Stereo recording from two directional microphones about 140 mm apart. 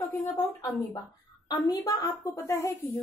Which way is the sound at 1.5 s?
25° left (ahead or behind).